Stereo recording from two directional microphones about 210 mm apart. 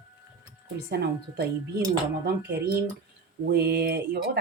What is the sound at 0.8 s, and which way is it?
Speech, 50° right (ahead or behind).